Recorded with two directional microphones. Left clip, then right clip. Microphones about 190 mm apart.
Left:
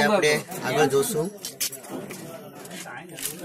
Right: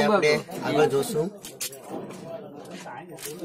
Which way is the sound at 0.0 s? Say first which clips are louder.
Even; centre (ahead or behind).